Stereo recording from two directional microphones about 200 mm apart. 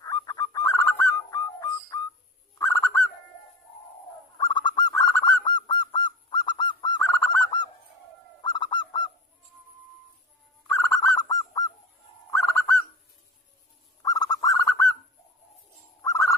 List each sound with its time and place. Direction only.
0.0 s bird: 20° left (ahead or behind)
4.4 s bird: 20° left (ahead or behind)
5.5 s honk: 20° left (ahead or behind)
5.8 s bird: 25° left (ahead or behind)
10.7 s bird: 10° left (ahead or behind)
14.0 s bird: 20° left (ahead or behind)
16.0 s bird: 15° left (ahead or behind)